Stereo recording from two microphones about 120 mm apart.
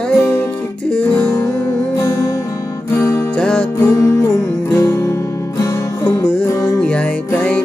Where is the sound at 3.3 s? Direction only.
5° left (ahead or behind).